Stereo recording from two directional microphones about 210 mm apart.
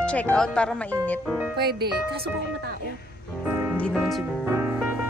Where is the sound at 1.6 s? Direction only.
50° right (ahead or behind).